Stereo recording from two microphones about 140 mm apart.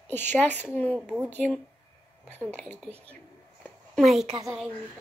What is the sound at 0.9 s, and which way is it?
Speech, 10° right (ahead or behind).